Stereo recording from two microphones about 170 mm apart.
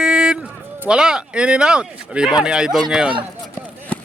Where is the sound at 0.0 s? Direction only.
5° right (ahead or behind).